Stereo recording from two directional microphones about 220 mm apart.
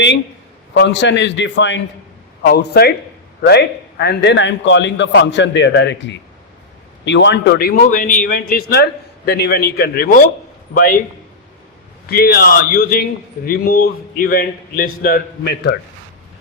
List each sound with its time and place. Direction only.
0.7 s a man's voice: 55° left (ahead or behind)
12.0 s a man's voice: 45° left (ahead or behind)